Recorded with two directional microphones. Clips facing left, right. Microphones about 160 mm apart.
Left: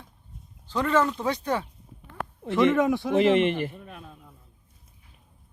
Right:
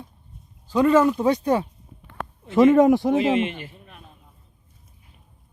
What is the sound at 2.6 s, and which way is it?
Speech, 40° right (ahead or behind).